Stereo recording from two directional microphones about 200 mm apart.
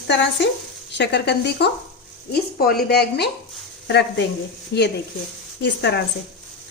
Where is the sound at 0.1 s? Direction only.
60° left (ahead or behind).